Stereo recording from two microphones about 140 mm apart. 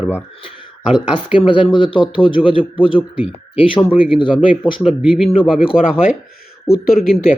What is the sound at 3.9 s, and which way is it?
Speech, 10° right (ahead or behind).